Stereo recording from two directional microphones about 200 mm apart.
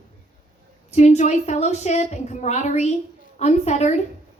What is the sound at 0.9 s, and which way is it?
A woman's voice, 35° left (ahead or behind).